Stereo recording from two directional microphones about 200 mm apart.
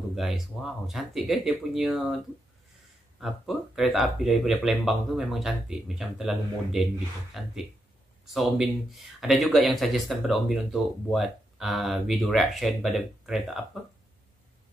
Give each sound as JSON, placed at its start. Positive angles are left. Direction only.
{"t": 0.1, "sound": "speech", "side_deg": 0}
{"t": 3.2, "sound": "speech", "side_deg": 0}